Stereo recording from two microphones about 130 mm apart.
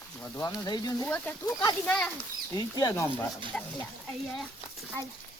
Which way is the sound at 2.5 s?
30° left (ahead or behind).